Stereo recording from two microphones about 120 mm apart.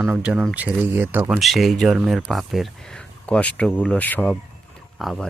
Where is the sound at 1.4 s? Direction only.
Centre (ahead or behind).